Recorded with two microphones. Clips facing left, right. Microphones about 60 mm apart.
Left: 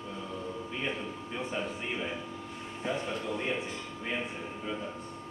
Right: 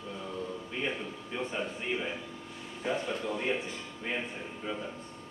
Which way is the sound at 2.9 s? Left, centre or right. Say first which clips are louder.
Right 1 dB; right.